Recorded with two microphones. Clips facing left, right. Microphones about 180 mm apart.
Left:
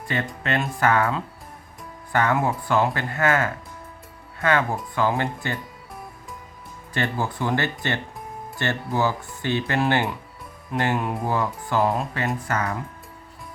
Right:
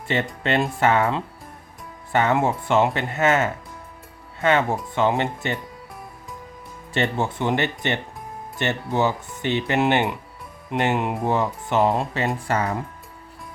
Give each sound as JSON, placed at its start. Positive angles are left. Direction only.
{"t": 0.1, "sound": "speech", "side_deg": -25}
{"t": 6.9, "sound": "speech", "side_deg": -25}